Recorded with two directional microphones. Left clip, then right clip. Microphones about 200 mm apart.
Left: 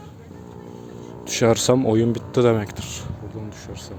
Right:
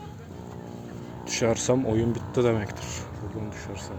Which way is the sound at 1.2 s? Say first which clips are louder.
Left 6 dB; 30° left (ahead or behind).